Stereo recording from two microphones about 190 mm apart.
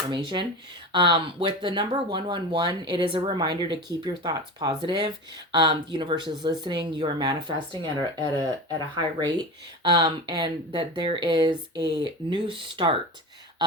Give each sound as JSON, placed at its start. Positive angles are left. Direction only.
{"t": 0.1, "sound": "speech", "side_deg": -25}
{"t": 9.0, "sound": "speech", "side_deg": -20}